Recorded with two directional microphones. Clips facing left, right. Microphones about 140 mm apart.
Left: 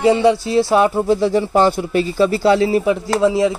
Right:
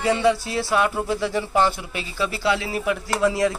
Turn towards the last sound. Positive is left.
turn(degrees=25)  # may be behind; listen again after turning